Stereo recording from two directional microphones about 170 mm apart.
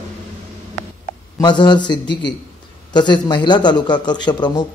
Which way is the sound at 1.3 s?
25° left (ahead or behind).